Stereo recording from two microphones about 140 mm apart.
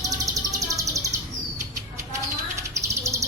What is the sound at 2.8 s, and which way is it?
Bird, 20° right (ahead or behind).